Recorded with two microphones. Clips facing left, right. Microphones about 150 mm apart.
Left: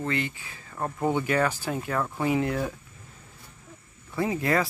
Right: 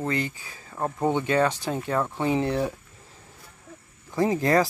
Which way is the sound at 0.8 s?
20° right (ahead or behind).